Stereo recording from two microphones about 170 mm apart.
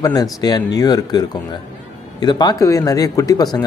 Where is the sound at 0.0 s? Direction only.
20° left (ahead or behind).